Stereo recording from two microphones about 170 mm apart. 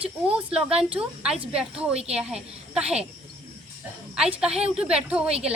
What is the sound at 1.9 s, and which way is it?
Speech, 35° right (ahead or behind).